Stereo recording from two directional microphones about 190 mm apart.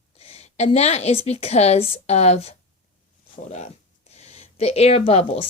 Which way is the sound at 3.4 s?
35° left (ahead or behind).